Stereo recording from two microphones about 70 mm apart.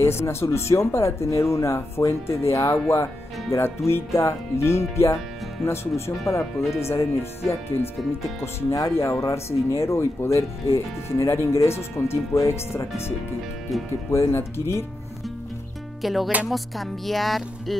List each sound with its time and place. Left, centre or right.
0.0 s speech: left
14.1 s speech: left
16.0 s speech: centre
16.4 s music: centre